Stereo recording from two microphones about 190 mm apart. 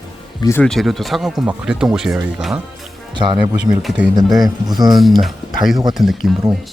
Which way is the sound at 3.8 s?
5° right (ahead or behind).